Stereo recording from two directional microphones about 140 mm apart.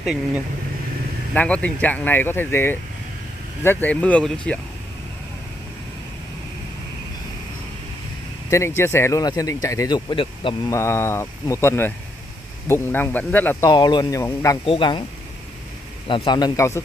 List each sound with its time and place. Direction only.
0.0 s speech: 5° right (ahead or behind)
1.3 s speech: 10° left (ahead or behind)
8.5 s speech: 20° left (ahead or behind); by 10.5 s 35° left (ahead or behind)
10.7 s speech: 20° left (ahead or behind)
13.7 s speech: 30° left (ahead or behind)
14.6 s speech: 35° left (ahead or behind)
16.1 s speech: 30° left (ahead or behind)